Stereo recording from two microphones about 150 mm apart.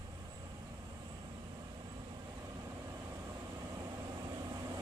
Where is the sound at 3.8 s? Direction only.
25° right (ahead or behind).